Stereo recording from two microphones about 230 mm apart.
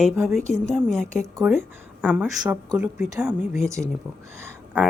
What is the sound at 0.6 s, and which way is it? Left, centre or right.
A woman's voice, centre.